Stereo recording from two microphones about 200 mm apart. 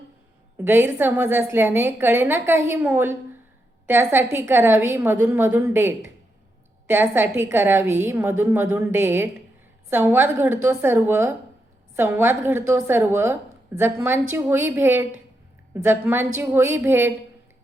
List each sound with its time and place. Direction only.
0.5 s a woman's voice: 10° right (ahead or behind)